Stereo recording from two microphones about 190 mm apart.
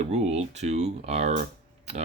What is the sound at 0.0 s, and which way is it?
Speech, 35° right (ahead or behind).